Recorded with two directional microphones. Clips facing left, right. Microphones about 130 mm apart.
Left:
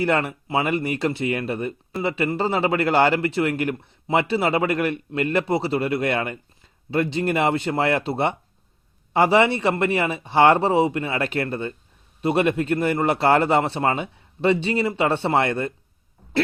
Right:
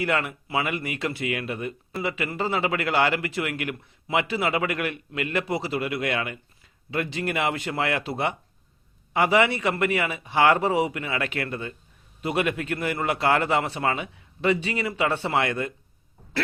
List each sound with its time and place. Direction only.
0.0 s a man's voice: 35° left (ahead or behind)